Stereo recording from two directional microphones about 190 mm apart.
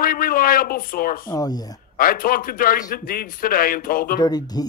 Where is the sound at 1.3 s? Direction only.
20° left (ahead or behind).